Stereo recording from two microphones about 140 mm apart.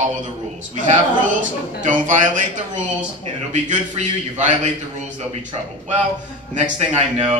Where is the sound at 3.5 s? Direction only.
55° right (ahead or behind).